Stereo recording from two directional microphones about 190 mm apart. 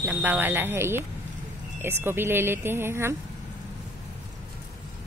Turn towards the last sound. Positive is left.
turn(degrees=-15)  # may be behind; listen again after turning